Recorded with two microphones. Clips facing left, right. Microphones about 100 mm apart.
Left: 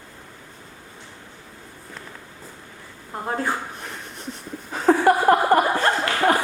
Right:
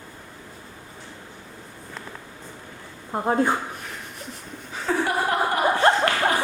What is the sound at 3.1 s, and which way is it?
Speech, 20° right (ahead or behind).